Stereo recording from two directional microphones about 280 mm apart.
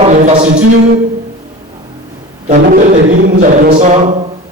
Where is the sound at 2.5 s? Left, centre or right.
Right.